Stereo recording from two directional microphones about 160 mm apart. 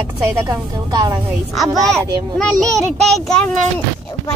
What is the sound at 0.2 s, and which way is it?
Speech, 20° right (ahead or behind).